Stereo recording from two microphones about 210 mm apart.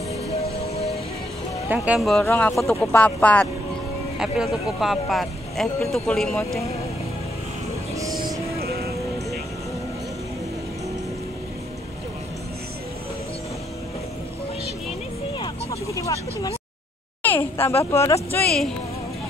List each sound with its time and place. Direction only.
1.7 s speech: 5° right (ahead or behind)
8.5 s music: 50° right (ahead or behind)
15.3 s vehicle: 25° left (ahead or behind)
17.2 s a sound: 10° left (ahead or behind)
17.9 s speech: 15° left (ahead or behind)